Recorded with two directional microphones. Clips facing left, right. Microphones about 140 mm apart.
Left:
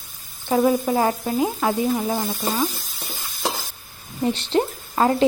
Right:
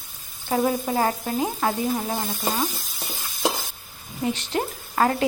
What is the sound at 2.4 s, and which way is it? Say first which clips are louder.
Speech: left 2 dB; 10° right (ahead or behind).